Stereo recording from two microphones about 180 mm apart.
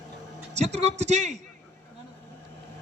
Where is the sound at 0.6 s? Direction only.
40° right (ahead or behind).